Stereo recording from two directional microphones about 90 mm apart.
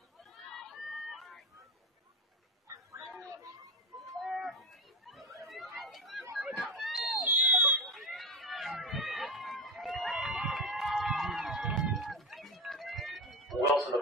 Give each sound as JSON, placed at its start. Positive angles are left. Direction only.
{"t": 0.2, "sound": "run", "side_deg": 0}
{"t": 2.7, "sound": "a sound", "side_deg": -40}
{"t": 4.0, "sound": "livestock", "side_deg": 0}
{"t": 5.8, "sound": "chatter", "side_deg": 0}
{"t": 6.3, "sound": "a sound", "side_deg": 0}
{"t": 7.2, "sound": "fire alarm", "side_deg": -20}
{"t": 7.8, "sound": "run", "side_deg": 0}